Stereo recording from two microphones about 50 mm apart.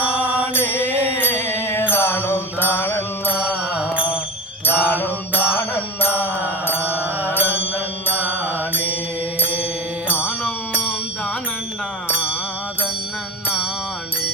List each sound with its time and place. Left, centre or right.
0.5 s mantra: left
1.2 s music: left
1.9 s mantra: left
3.4 s music: centre
4.7 s mantra: right
4.9 s mantra: left
6.7 s mantra: right
9.4 s mantra: right